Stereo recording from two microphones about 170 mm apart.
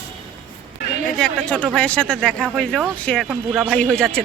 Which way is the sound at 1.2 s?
5° left (ahead or behind).